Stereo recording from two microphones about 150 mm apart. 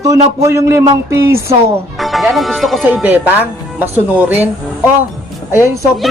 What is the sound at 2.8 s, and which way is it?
Speech, 10° right (ahead or behind).